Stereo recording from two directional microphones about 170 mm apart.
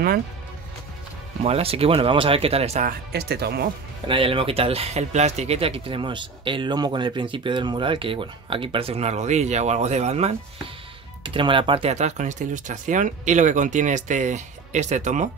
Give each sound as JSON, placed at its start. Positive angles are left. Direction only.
{"t": 1.4, "sound": "speech", "side_deg": -35}
{"t": 3.1, "sound": "speech", "side_deg": -70}
{"t": 4.1, "sound": "speech", "side_deg": -30}
{"t": 11.2, "sound": "speech", "side_deg": -30}